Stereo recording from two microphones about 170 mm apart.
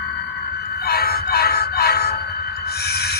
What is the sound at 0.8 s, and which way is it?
Music, 65° left (ahead or behind).